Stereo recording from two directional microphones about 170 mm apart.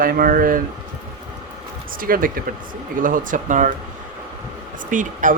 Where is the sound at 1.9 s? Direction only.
55° right (ahead or behind).